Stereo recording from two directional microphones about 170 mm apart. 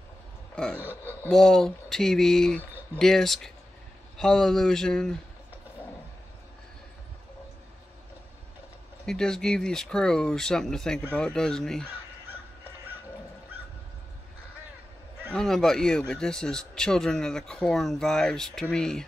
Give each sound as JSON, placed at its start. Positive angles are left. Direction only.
{"t": 1.3, "sound": "speech", "side_deg": 5}
{"t": 9.0, "sound": "speech", "side_deg": 5}
{"t": 15.3, "sound": "speech", "side_deg": 5}